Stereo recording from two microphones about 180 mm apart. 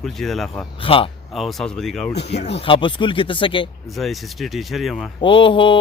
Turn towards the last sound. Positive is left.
turn(degrees=25)  # may be behind; listen again after turning